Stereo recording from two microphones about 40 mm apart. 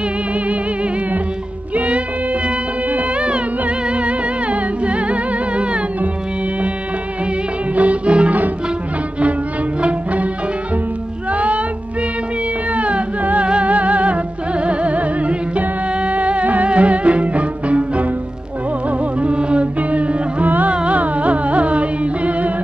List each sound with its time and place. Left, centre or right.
2.9 s music: right
7.7 s music: right
9.8 s music: right
11.3 s music: right
12.7 s music: right